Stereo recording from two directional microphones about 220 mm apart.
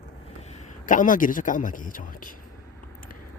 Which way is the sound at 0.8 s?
35° left (ahead or behind).